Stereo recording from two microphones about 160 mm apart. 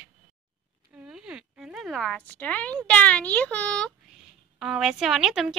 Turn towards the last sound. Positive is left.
turn(degrees=0)  # may be behind; listen again after turning